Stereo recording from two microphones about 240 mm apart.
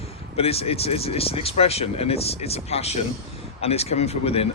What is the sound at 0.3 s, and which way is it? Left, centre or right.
Speech, left.